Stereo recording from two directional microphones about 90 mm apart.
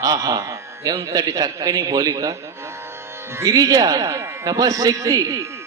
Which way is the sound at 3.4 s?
40° right (ahead or behind).